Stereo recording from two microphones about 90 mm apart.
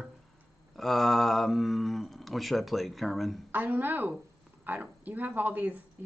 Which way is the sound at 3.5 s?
20° right (ahead or behind).